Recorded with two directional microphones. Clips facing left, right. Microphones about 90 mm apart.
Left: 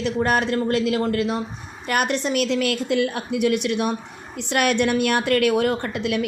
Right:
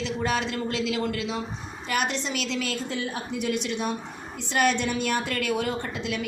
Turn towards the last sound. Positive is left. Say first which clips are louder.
# left 6 dB
turn(degrees=60)  # may be behind; listen again after turning